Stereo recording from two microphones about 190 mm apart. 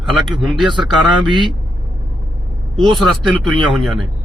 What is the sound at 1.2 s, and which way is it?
Speech, 25° right (ahead or behind).